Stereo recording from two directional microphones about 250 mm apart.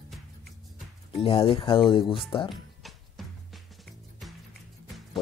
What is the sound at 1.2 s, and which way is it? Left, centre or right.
Speech, left.